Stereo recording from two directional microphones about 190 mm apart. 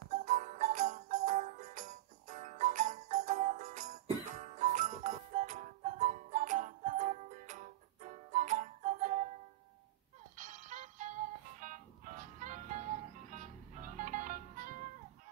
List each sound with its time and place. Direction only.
0.1 s jingle bell: 40° right (ahead or behind)
10.3 s music: 40° right (ahead or behind)